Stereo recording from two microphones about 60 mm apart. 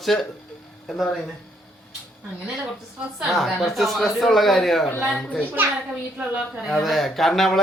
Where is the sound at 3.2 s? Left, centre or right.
Centre.